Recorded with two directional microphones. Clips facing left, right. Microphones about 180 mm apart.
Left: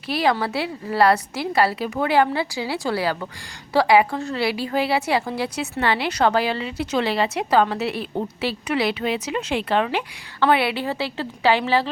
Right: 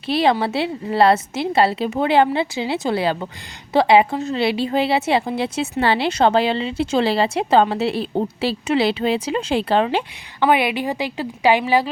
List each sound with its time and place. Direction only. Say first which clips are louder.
0.1 s a woman's voice: right 3 dB; 25° right (ahead or behind)
10.4 s a woman's voice: right 2 dB; 15° right (ahead or behind)